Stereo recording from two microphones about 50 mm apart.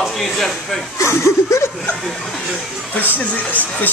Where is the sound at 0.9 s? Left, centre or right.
Left.